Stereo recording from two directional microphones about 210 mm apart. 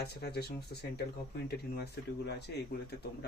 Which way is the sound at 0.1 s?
50° left (ahead or behind).